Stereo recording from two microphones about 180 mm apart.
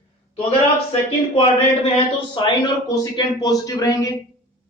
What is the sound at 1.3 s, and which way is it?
Speech, 35° left (ahead or behind).